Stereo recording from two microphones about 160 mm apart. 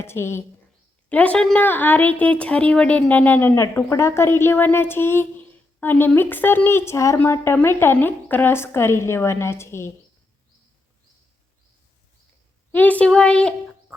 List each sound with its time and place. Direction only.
0.0 s a woman's voice: 15° left (ahead or behind)
12.7 s a woman's voice: 10° left (ahead or behind)